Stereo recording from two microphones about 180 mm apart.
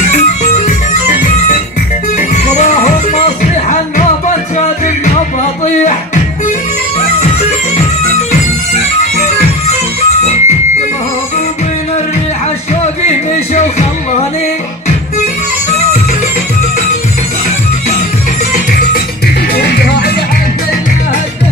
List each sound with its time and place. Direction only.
0.1 s music: 40° left (ahead or behind)
8.3 s music: 40° left (ahead or behind)
13.3 s music: 40° left (ahead or behind)
19.5 s music: 65° left (ahead or behind)